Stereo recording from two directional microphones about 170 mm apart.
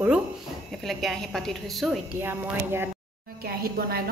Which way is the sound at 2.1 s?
15° right (ahead or behind).